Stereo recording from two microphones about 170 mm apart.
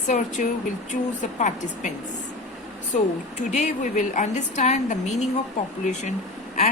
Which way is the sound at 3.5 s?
45° left (ahead or behind).